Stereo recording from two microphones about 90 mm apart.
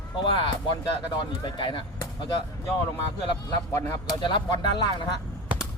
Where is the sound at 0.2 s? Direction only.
65° left (ahead or behind).